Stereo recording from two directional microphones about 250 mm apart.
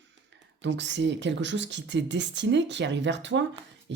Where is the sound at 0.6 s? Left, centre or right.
Right.